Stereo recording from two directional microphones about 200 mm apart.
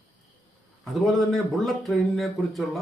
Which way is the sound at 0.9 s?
Centre (ahead or behind).